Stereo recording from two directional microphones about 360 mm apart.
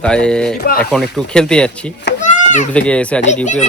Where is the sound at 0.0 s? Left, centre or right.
Centre.